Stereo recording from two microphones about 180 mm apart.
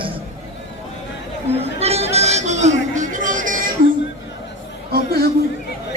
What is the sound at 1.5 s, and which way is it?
Chatter, 35° right (ahead or behind).